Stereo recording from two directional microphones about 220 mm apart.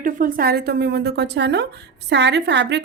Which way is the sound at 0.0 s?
40° right (ahead or behind).